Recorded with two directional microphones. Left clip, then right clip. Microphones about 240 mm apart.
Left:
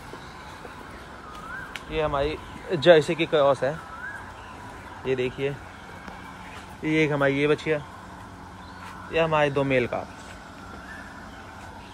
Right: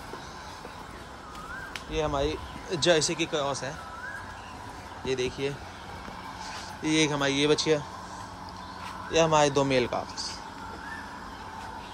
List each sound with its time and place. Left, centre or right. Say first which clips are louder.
1.9 s speech: left 3 dB; right
5.1 s speech: left 3 dB; centre
6.8 s speech: left 3 dB; centre
9.1 s speech: even; right